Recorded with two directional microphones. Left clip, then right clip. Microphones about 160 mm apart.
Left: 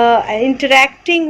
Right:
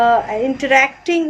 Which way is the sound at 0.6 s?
25° left (ahead or behind).